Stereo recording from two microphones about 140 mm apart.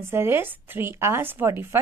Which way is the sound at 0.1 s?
15° right (ahead or behind).